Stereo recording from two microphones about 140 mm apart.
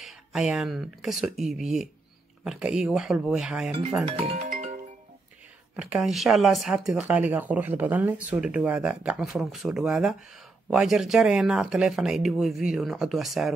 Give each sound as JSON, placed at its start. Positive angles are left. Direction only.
{"t": 0.0, "sound": "speech", "side_deg": -5}
{"t": 4.0, "sound": "speech", "side_deg": -40}
{"t": 4.5, "sound": "music", "side_deg": -70}
{"t": 5.8, "sound": "speech", "side_deg": -5}